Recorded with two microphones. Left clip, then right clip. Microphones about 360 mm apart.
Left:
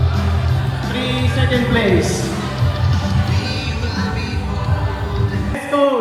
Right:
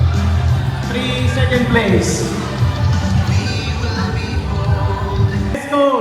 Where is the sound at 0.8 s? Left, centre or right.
Centre.